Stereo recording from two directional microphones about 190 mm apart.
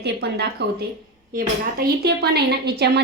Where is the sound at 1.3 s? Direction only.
50° right (ahead or behind).